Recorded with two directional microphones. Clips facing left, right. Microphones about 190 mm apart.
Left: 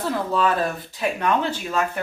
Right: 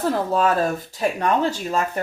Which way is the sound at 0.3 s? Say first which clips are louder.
Right 2 dB; 40° right (ahead or behind).